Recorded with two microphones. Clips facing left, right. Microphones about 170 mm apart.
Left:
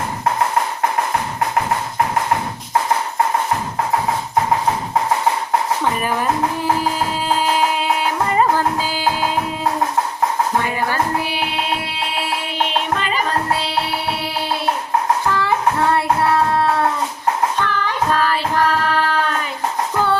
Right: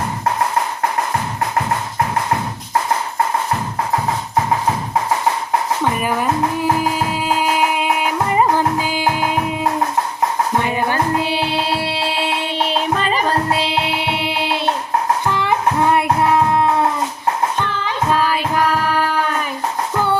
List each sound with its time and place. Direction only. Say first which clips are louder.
8.3 s music: right 1 dB; 15° right (ahead or behind)
10.6 s music: right 2 dB; 20° right (ahead or behind); by 13.3 s 35° right (ahead or behind)
14.0 s music: right 2 dB; 20° right (ahead or behind)
15.3 s music: even; 20° right (ahead or behind)
17.6 s child singing: left 1 dB; 20° right (ahead or behind)